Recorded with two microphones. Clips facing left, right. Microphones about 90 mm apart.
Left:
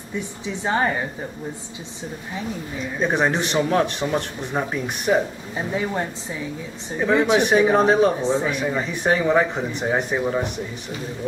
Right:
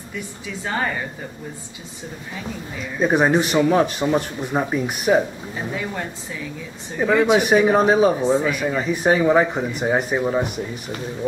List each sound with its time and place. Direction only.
0.1 s speech: 25° left (ahead or behind)
3.0 s speech: 5° right (ahead or behind)
7.0 s speech: 10° right (ahead or behind)